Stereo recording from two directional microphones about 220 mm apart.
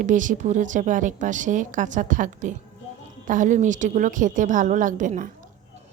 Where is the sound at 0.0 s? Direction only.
35° right (ahead or behind).